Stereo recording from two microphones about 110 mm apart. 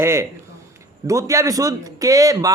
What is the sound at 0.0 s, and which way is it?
A man's voice, 25° right (ahead or behind).